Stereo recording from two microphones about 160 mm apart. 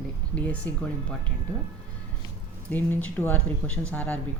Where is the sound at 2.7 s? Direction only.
10° left (ahead or behind).